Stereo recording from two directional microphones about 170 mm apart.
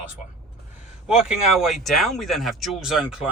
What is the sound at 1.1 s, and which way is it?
Speech, 5° right (ahead or behind).